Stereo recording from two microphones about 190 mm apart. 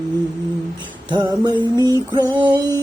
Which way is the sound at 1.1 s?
20° right (ahead or behind).